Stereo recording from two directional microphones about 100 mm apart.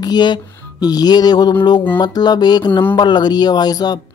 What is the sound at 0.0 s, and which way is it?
Music, 45° left (ahead or behind).